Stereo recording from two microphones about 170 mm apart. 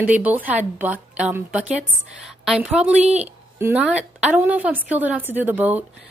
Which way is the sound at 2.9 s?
40° right (ahead or behind).